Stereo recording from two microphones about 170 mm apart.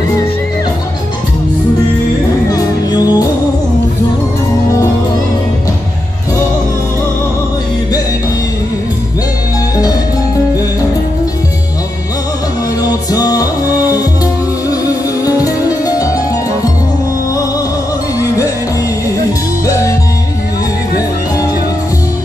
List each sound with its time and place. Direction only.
2.5 s music: 20° left (ahead or behind)
12.8 s music: 20° left (ahead or behind)
15.2 s music: 20° left (ahead or behind)
19.6 s music: 20° left (ahead or behind)